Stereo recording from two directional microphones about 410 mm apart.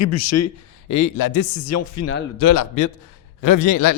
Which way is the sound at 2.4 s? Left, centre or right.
Left.